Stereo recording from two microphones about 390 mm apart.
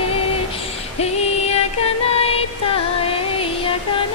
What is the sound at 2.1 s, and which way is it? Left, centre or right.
Music, centre.